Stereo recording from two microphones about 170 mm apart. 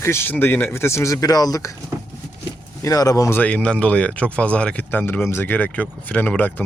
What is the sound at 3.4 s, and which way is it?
Speech, 10° left (ahead or behind).